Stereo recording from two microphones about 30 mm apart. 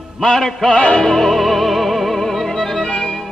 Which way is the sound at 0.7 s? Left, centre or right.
Left.